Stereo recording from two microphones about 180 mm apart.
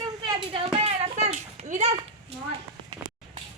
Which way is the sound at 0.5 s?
30° right (ahead or behind).